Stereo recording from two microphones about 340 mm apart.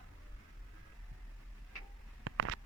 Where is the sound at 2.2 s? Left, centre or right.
Right.